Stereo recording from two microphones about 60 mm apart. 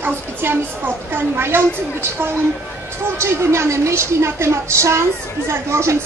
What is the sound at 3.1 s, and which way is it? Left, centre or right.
A woman's voice, right.